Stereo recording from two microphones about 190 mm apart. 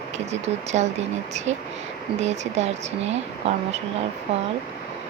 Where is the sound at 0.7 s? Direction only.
35° right (ahead or behind).